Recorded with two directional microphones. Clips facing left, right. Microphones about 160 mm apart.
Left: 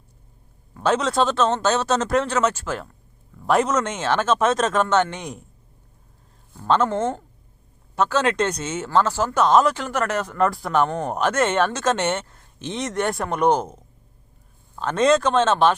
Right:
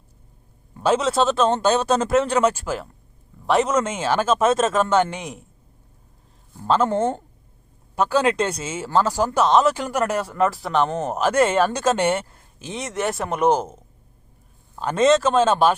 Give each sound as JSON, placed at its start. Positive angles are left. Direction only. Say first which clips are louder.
{"t": 0.8, "sound": "speech", "louder": "right 1 dB", "side_deg": -5}
{"t": 3.4, "sound": "speech", "louder": "right 1 dB", "side_deg": 0}
{"t": 6.8, "sound": "speech", "louder": "right 2 dB", "side_deg": -30}
{"t": 7.9, "sound": "speech", "louder": "right 1 dB", "side_deg": -10}
{"t": 9.5, "sound": "speech", "louder": "left 1 dB", "side_deg": 0}
{"t": 9.7, "sound": "speech", "louder": "right 1 dB", "side_deg": -10}